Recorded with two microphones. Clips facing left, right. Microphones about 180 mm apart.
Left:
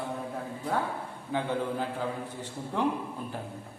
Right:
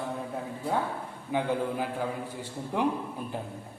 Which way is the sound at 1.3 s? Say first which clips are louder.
Right 2 dB; 15° right (ahead or behind).